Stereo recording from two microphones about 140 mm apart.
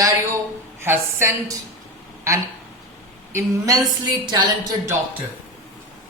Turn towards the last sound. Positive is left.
turn(degrees=-15)  # may be behind; listen again after turning